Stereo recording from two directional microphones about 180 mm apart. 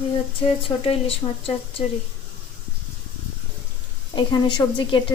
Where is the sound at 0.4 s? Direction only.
30° left (ahead or behind).